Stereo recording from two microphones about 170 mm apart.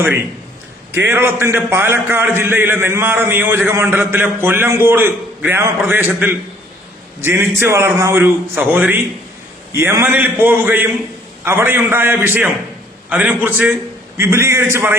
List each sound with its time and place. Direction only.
0.9 s a man's voice: 15° right (ahead or behind)